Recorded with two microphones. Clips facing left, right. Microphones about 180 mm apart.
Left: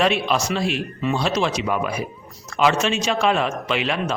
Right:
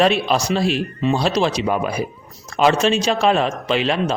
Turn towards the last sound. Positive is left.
turn(degrees=-30)  # may be behind; listen again after turning